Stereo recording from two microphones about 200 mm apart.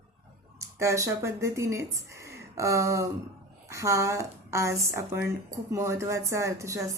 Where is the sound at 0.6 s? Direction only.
15° right (ahead or behind).